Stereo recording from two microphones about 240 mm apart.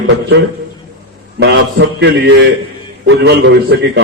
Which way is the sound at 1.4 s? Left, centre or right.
Right.